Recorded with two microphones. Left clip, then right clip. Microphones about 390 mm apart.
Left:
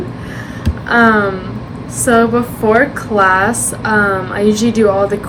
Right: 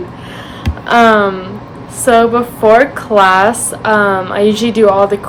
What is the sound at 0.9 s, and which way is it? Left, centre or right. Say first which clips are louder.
Speech: right 3 dB; right.